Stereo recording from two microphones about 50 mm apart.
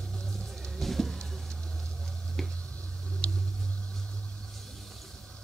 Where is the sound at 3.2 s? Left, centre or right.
Left.